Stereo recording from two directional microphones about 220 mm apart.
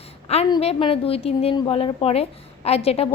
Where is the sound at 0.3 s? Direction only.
30° left (ahead or behind).